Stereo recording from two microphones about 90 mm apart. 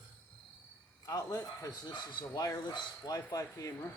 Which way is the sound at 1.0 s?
40° left (ahead or behind).